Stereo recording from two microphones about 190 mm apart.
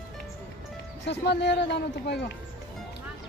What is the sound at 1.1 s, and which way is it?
A man's voice, 65° left (ahead or behind).